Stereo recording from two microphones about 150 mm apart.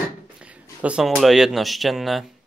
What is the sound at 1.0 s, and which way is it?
Speech, centre (ahead or behind).